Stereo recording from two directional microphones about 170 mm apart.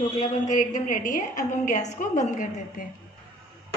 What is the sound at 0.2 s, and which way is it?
A woman's voice, 50° left (ahead or behind).